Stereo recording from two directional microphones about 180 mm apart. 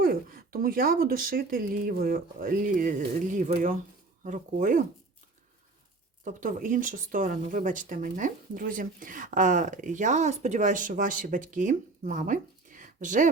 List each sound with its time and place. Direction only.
0.0 s speech: 55° right (ahead or behind)
6.2 s speech: 45° right (ahead or behind)